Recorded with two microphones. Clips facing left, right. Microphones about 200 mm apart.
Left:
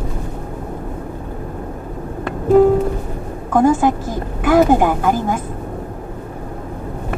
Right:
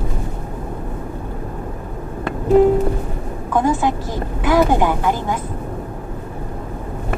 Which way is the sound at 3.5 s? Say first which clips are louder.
Left 4 dB; 45° left (ahead or behind).